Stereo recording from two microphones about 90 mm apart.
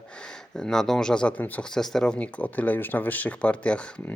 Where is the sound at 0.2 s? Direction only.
10° left (ahead or behind).